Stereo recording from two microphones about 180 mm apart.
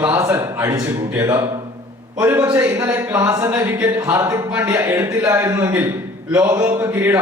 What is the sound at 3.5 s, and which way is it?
A man's voice, 10° right (ahead or behind).